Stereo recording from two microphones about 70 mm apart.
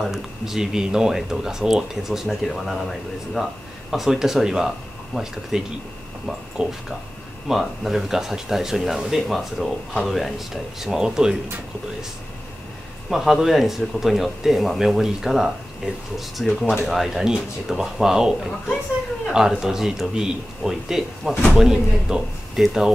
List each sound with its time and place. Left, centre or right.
0.0 s speech: centre
6.6 s speech: centre
13.1 s speech: centre